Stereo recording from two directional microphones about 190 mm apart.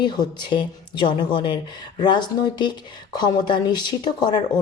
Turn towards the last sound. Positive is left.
turn(degrees=20)  # may be behind; listen again after turning